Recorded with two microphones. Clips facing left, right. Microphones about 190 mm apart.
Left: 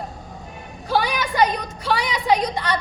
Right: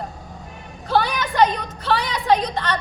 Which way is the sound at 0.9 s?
10° left (ahead or behind).